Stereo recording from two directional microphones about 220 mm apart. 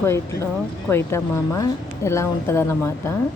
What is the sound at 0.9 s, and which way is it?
A woman's voice, 10° left (ahead or behind).